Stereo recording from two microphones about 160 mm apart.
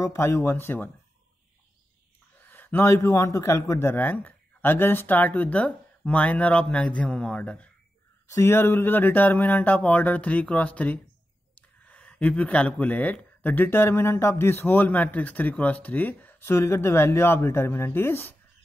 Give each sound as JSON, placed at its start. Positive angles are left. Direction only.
{"t": 0.0, "sound": "speech", "side_deg": 15}
{"t": 2.4, "sound": "speech", "side_deg": 10}